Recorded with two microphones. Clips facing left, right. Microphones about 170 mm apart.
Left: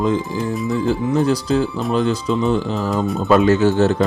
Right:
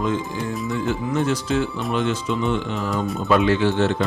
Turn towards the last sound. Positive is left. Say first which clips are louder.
# left 4 dB
turn(degrees=40)  # may be behind; listen again after turning